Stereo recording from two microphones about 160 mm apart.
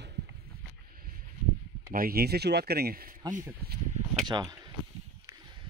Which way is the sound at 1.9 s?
65° right (ahead or behind).